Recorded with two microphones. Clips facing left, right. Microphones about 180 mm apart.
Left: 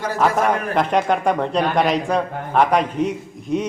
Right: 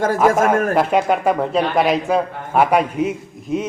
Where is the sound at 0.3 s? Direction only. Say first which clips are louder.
Right 4 dB; 45° right (ahead or behind).